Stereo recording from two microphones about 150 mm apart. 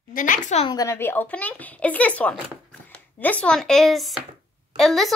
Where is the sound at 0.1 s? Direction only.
60° left (ahead or behind).